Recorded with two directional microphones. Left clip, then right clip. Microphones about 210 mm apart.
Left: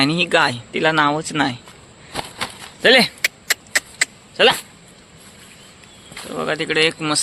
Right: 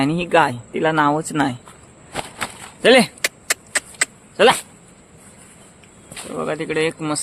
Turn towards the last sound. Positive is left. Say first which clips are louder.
# left 3 dB
turn(degrees=-5)  # may be behind; listen again after turning